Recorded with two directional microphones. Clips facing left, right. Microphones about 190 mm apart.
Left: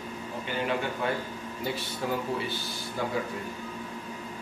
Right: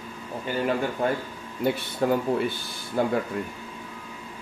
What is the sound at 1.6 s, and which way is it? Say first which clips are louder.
Speech: right 9 dB; 55° right (ahead or behind).